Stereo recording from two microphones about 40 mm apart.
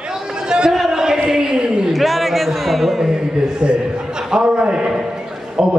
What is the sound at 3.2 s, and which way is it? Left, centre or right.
A man's voice, right.